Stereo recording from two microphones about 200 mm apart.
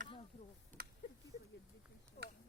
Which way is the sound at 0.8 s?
50° right (ahead or behind).